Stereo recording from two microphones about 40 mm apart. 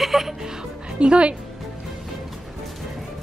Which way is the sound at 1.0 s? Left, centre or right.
Right.